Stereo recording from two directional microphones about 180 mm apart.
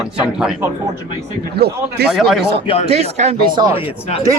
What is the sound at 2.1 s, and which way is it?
Speech, centre (ahead or behind).